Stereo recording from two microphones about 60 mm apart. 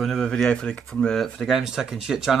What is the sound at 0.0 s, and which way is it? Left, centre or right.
Speech, centre.